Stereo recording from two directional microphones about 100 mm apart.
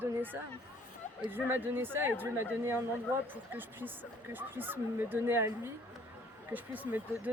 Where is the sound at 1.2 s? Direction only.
20° right (ahead or behind).